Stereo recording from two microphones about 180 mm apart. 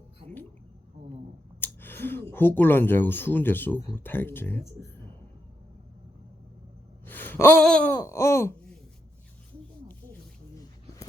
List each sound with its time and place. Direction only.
1.6 s speech: 10° left (ahead or behind)
7.0 s a sound: 10° left (ahead or behind)
7.9 s babbling: 15° left (ahead or behind)